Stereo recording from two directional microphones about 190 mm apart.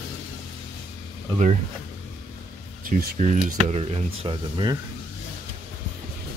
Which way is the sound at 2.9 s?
50° right (ahead or behind).